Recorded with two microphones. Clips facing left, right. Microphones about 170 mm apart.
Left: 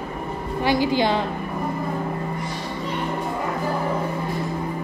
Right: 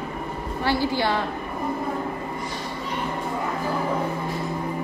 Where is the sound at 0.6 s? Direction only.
15° left (ahead or behind).